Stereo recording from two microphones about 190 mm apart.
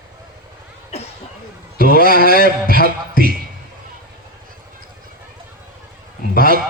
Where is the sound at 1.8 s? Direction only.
50° left (ahead or behind).